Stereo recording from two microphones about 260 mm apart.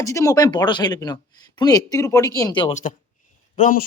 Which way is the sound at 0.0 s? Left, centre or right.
Centre.